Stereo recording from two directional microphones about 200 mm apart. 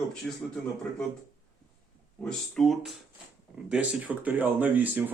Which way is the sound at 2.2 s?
Centre (ahead or behind).